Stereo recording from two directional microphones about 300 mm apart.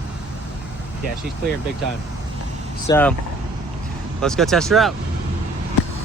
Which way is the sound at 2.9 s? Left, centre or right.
Centre.